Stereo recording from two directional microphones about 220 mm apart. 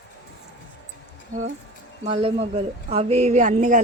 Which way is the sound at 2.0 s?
25° right (ahead or behind).